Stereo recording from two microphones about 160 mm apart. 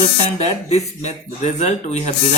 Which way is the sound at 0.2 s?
40° left (ahead or behind).